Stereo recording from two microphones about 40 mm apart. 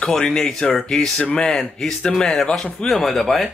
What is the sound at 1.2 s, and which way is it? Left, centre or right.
Speech, left.